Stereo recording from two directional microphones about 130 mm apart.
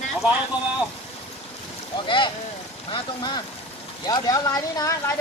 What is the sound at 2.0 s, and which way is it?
Speech, 35° left (ahead or behind).